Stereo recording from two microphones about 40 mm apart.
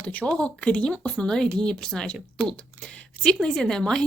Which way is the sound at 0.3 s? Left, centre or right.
Left.